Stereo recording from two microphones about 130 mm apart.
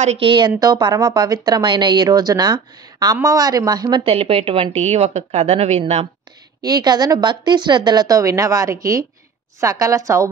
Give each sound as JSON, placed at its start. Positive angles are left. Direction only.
{"t": 0.0, "sound": "a woman's voice", "side_deg": -55}
{"t": 0.6, "sound": "speech", "side_deg": -30}
{"t": 4.0, "sound": "a woman's voice", "side_deg": -45}
{"t": 6.6, "sound": "a woman's voice", "side_deg": -30}